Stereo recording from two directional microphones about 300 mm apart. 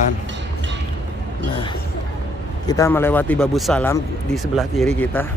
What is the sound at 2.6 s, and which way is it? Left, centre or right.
Speech, centre.